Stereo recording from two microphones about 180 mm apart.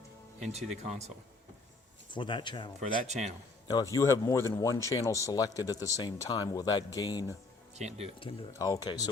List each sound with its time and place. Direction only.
0.5 s speech: 35° right (ahead or behind)
2.0 s speech: 25° left (ahead or behind)
3.1 s speech: 40° right (ahead or behind)
3.7 s speech: 20° left (ahead or behind)
7.8 s speech: 40° right (ahead or behind)
8.5 s speech: 20° left (ahead or behind)